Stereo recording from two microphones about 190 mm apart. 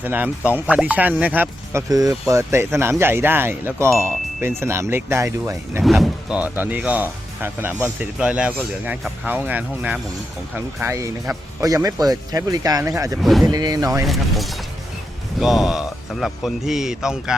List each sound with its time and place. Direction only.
0.0 s speech: 10° right (ahead or behind)
5.8 s speech: centre (ahead or behind); by 13.1 s 15° right (ahead or behind)
13.2 s speech: centre (ahead or behind)
13.5 s speech: 20° right (ahead or behind)
14.1 s speech: centre (ahead or behind)